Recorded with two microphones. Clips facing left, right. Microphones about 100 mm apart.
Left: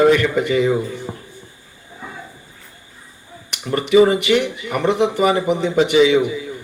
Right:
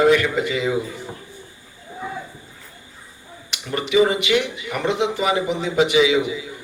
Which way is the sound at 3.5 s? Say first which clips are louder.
Left 5 dB; 50° left (ahead or behind).